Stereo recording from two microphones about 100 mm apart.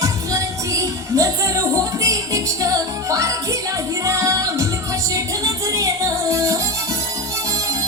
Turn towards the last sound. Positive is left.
turn(degrees=-35)  # may be behind; listen again after turning